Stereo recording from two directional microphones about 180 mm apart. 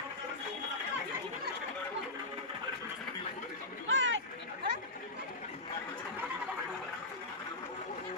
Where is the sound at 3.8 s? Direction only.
90° right.